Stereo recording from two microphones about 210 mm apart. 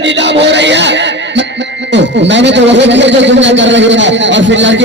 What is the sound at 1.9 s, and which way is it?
Speech, 55° right (ahead or behind).